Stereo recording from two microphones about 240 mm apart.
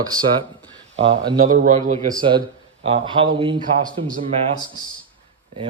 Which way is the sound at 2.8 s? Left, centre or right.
Right.